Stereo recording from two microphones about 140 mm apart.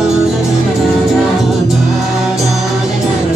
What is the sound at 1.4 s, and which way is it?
Music, centre (ahead or behind).